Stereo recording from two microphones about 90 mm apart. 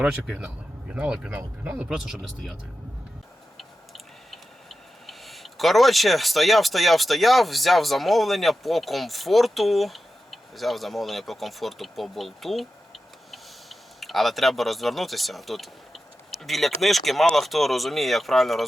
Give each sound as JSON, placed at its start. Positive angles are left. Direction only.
{"t": 0.0, "sound": "speech", "side_deg": -10}
{"t": 3.6, "sound": "a sound", "side_deg": 0}
{"t": 16.4, "sound": "speech", "side_deg": 0}